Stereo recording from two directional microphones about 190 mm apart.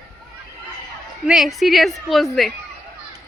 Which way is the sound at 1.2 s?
Centre (ahead or behind).